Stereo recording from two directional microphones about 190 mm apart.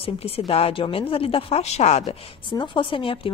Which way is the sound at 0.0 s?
30° left (ahead or behind).